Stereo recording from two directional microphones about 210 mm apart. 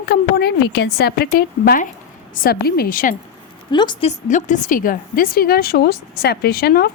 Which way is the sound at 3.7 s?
20° left (ahead or behind).